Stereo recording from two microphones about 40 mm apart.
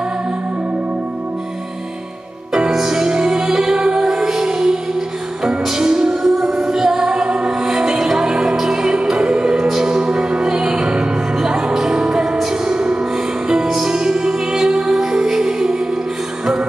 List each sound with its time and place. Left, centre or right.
2.7 s music: centre
13.5 s music: centre